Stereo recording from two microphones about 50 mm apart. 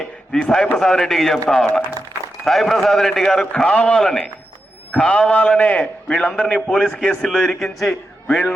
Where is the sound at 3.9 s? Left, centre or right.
Centre.